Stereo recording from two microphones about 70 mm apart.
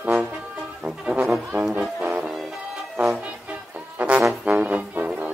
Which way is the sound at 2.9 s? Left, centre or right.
Centre.